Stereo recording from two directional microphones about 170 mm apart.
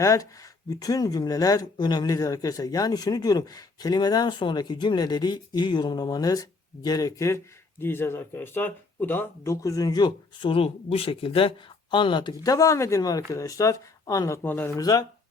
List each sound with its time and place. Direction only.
0.0 s speech: 20° left (ahead or behind)
14.8 s speech: 20° left (ahead or behind)